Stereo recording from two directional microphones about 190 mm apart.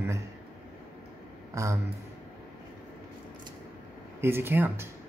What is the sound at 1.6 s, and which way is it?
Speech, 15° right (ahead or behind).